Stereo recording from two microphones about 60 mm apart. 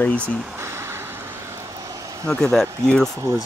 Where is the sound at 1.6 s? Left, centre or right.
Right.